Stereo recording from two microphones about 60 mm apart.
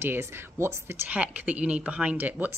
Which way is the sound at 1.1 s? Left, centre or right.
Right.